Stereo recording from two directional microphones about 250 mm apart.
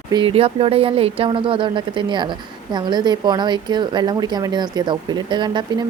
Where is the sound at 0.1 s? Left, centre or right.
Centre.